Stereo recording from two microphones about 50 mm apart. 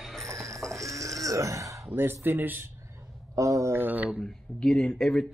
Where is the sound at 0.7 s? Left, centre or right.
Right.